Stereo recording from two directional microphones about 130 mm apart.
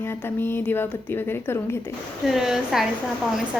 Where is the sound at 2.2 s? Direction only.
Centre (ahead or behind).